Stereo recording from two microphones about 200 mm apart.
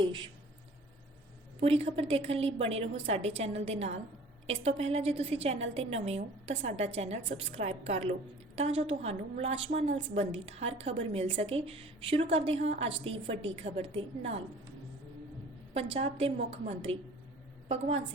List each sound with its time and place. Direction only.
1.6 s a woman's voice: 30° right (ahead or behind)
15.7 s a woman's voice: 30° right (ahead or behind)